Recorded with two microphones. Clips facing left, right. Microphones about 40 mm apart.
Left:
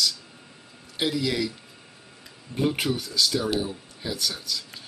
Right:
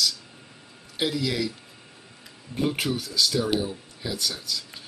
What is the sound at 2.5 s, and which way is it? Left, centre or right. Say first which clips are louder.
Speech: left 1 dB; centre.